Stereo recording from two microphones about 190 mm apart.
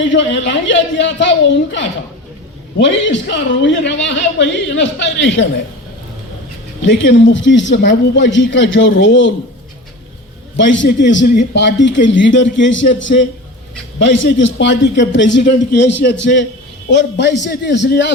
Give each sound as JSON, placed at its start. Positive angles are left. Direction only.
{"t": 0.0, "sound": "a man's voice", "side_deg": 75}
{"t": 6.8, "sound": "a man's voice", "side_deg": 70}
{"t": 10.6, "sound": "a man's voice", "side_deg": 70}
{"t": 14.0, "sound": "a man's voice", "side_deg": 75}